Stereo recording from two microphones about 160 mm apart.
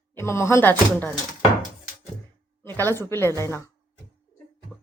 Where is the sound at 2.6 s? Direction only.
15° left (ahead or behind).